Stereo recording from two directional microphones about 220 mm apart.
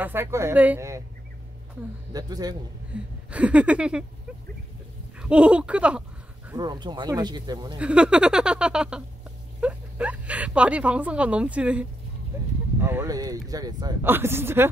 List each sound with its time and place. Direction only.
0.0 s speech: 10° right (ahead or behind)
2.1 s speech: 15° right (ahead or behind)
2.9 s a sound: 5° right (ahead or behind)
5.2 s speech: 5° right (ahead or behind)
6.5 s speech: 20° right (ahead or behind)
7.8 s speech: 5° right (ahead or behind)